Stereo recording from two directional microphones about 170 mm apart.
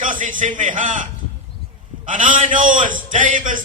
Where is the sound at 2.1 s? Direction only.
50° right (ahead or behind).